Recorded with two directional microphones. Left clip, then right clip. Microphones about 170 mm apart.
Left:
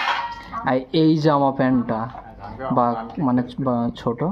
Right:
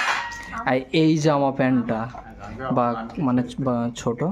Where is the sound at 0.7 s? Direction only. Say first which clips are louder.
Left 1 dB; 35° right (ahead or behind).